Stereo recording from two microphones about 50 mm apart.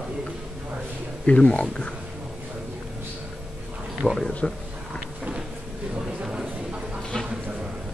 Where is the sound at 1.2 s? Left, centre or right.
Left.